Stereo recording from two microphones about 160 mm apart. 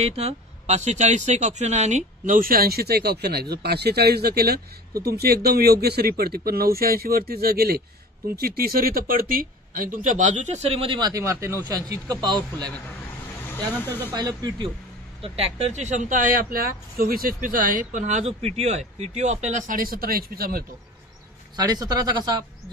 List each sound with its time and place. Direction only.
0.0 s speech: 40° right (ahead or behind)
14.1 s speech: 25° right (ahead or behind)
15.2 s speech: 40° right (ahead or behind); by 20.6 s 70° right (ahead or behind)
21.5 s speech: 25° right (ahead or behind)